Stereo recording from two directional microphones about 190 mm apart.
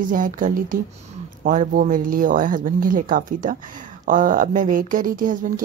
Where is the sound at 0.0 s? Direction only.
45° right (ahead or behind).